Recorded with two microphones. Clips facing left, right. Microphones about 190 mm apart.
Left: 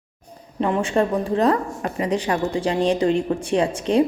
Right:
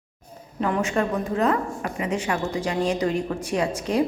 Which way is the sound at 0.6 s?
30° left (ahead or behind).